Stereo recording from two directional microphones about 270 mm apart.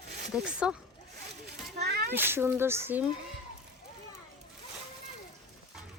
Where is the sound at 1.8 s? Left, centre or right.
Right.